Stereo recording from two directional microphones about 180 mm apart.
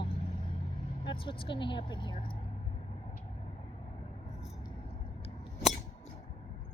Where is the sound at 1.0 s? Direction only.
30° left (ahead or behind).